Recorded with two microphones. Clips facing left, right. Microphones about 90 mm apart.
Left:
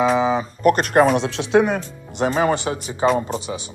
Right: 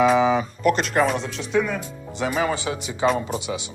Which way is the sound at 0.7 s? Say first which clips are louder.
Left 5 dB; 50° left (ahead or behind).